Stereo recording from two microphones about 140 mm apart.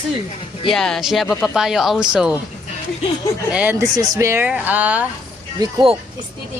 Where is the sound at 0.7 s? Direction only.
5° left (ahead or behind).